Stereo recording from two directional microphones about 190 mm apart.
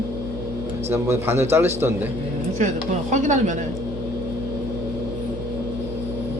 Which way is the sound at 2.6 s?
40° right (ahead or behind).